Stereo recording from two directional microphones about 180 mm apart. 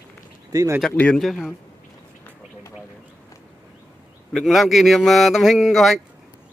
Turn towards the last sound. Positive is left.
turn(degrees=0)  # may be behind; listen again after turning